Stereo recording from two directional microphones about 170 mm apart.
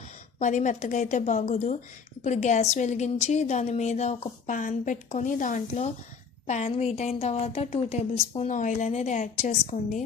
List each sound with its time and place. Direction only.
0.3 s a woman's voice: 45° left (ahead or behind)